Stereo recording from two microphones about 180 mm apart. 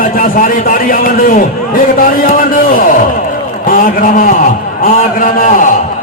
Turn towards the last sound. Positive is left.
turn(degrees=50)  # may be behind; listen again after turning